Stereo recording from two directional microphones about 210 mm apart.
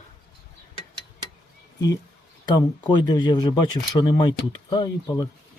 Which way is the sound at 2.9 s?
20° left (ahead or behind).